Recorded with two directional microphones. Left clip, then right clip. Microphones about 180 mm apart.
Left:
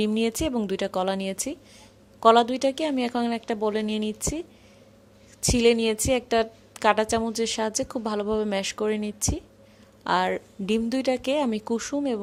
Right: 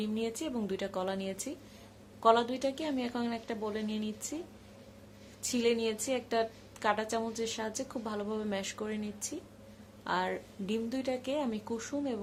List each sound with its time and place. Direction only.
0.0 s a woman's voice: 50° left (ahead or behind)
5.4 s a woman's voice: 45° left (ahead or behind)